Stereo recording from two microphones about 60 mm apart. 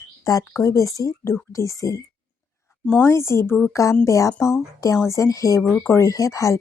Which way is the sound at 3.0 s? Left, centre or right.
Left.